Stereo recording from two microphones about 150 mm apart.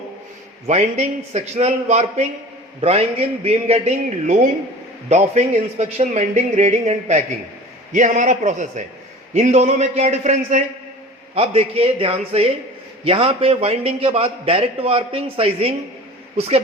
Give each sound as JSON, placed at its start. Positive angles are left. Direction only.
{"t": 0.7, "sound": "a man's voice", "side_deg": -45}